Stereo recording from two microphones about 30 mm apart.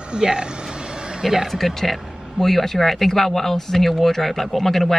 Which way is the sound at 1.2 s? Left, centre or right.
Centre.